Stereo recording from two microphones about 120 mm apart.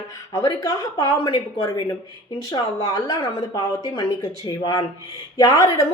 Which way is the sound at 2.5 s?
30° left (ahead or behind).